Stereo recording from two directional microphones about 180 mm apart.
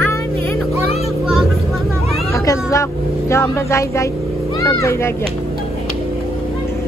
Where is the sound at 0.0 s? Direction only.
15° left (ahead or behind).